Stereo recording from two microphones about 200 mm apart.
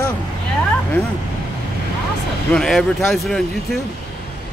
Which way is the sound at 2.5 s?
Centre (ahead or behind).